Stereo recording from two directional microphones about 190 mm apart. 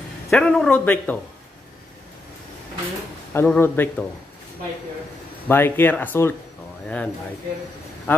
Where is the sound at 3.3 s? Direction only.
10° left (ahead or behind).